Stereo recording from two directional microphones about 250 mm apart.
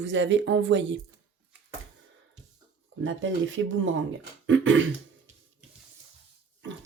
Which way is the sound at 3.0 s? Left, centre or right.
Right.